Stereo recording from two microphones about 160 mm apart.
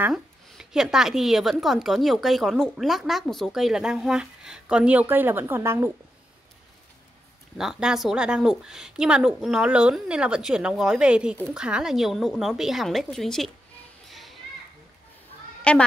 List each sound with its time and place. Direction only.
0.0 s speech: 5° right (ahead or behind)
7.5 s speech: 5° right (ahead or behind)
14.0 s children playing: centre (ahead or behind)
15.7 s a woman's voice: 5° left (ahead or behind)